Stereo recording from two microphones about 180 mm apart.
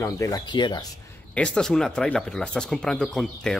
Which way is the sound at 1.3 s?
5° left (ahead or behind).